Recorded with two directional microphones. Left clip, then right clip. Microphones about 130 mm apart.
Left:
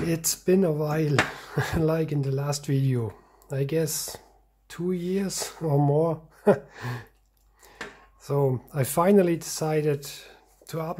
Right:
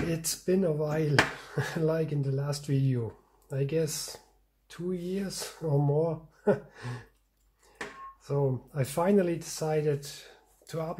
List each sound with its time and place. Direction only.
0.1 s speech: 40° left (ahead or behind)
4.6 s speech: 55° left (ahead or behind)
8.2 s speech: 45° left (ahead or behind)